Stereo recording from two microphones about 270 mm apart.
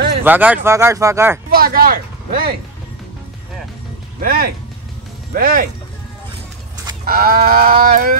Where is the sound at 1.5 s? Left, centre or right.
Right.